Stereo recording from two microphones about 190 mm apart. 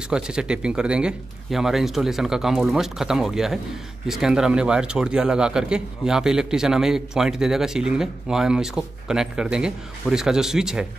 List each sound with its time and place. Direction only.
0.1 s a man's voice: 5° right (ahead or behind)